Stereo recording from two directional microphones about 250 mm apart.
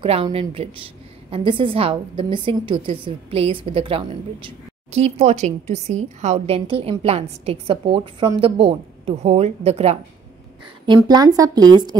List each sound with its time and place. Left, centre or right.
0.0 s a woman's voice: right